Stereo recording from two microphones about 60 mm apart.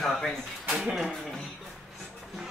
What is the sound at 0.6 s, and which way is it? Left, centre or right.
Speech, centre.